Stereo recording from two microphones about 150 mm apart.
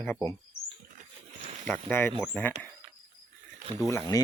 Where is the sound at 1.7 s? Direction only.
15° left (ahead or behind).